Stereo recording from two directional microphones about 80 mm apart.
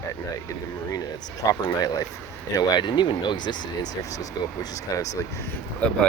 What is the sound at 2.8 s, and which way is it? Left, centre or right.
Speech, left.